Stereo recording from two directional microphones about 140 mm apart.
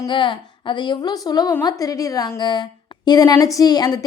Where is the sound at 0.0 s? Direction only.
35° left (ahead or behind).